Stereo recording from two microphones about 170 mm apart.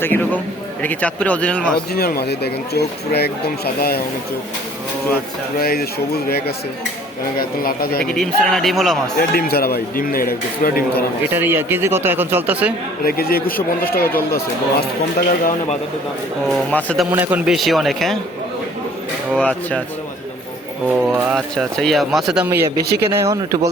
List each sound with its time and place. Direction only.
0.0 s speech: 10° left (ahead or behind)
1.9 s speech: 65° left (ahead or behind)
5.5 s a man's voice: 65° left (ahead or behind)
8.0 s speech: centre (ahead or behind)
9.1 s a man's voice: 65° left (ahead or behind)
11.3 s speech: 15° right (ahead or behind)
13.1 s a man's voice: 60° left (ahead or behind)
16.5 s speech: 5° left (ahead or behind)
17.1 s speech: 10° right (ahead or behind)
19.3 s speech: 5° left (ahead or behind)
20.8 s speech: centre (ahead or behind)
22.8 s speech: 70° right (ahead or behind)
23.2 s speech: 20° right (ahead or behind)